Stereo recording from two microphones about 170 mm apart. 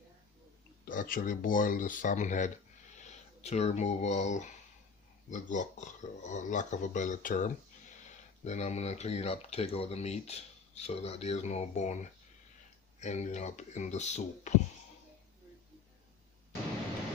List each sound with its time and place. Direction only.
0.9 s speech: 55° left (ahead or behind)
8.4 s speech: 40° left (ahead or behind)
13.0 s speech: 40° left (ahead or behind)